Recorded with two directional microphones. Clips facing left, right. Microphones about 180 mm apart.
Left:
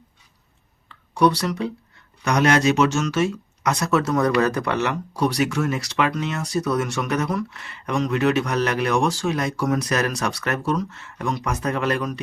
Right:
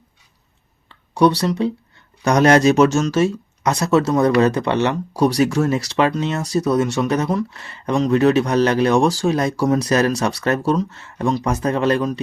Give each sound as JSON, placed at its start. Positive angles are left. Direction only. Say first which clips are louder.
{"t": 0.9, "sound": "speech", "louder": "right 3 dB", "side_deg": -30}